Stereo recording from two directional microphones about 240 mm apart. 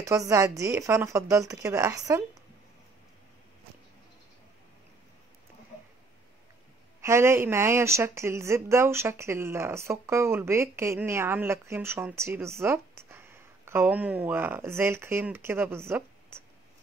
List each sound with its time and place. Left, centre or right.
0.0 s speech: centre
7.0 s speech: centre